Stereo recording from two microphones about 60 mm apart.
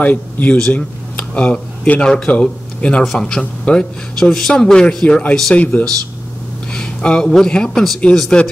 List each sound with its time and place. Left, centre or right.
0.0 s a man's voice: left
6.7 s a man's voice: centre